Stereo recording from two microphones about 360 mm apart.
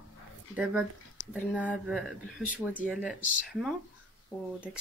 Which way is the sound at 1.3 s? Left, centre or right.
Centre.